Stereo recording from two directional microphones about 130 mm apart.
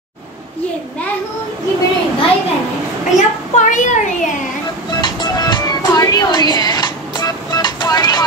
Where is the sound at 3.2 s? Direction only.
75° left (ahead or behind).